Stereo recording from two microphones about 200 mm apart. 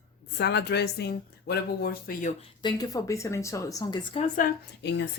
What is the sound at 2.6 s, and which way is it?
A woman's voice, 20° left (ahead or behind).